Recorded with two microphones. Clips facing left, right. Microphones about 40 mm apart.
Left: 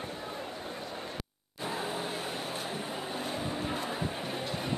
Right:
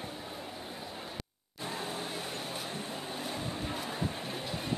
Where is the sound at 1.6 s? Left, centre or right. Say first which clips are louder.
Left 3 dB; centre.